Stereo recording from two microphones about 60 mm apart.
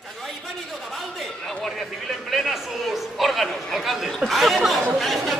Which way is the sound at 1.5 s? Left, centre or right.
Centre.